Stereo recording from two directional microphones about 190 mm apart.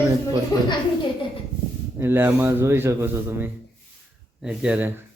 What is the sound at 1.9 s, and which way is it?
Speech, 10° right (ahead or behind).